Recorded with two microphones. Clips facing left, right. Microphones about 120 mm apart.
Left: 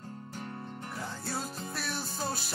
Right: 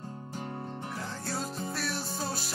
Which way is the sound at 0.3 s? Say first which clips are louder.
Right 4 dB; 25° right (ahead or behind).